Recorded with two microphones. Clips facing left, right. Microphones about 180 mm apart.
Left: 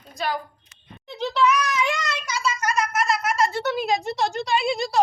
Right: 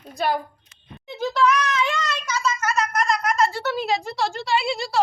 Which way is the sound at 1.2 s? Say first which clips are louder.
Right 1 dB; 5° left (ahead or behind).